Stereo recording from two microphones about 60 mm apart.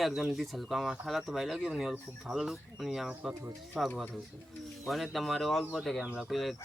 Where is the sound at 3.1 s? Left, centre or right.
Centre.